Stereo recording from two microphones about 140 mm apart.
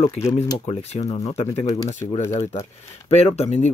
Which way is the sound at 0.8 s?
50° left (ahead or behind).